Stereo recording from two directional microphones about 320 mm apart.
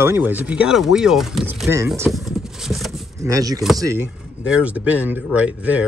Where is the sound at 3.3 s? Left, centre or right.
Centre.